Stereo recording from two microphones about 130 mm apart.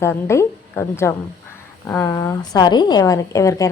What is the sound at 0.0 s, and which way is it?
A woman's voice, 20° left (ahead or behind).